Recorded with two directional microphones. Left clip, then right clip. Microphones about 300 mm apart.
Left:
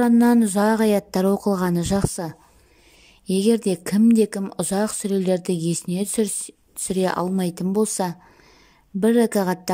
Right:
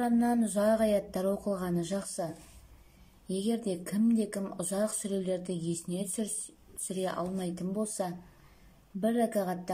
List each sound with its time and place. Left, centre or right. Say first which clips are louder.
0.0 s a woman's voice: left 11 dB; left